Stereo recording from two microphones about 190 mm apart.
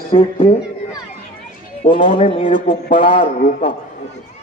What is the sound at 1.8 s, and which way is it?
A man's voice, 25° left (ahead or behind).